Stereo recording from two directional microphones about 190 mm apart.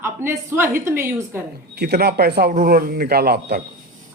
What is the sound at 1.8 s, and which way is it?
A man's voice, 60° right (ahead or behind).